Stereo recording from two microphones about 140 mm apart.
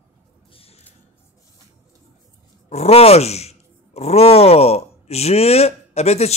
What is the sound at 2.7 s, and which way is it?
Speech, 50° left (ahead or behind).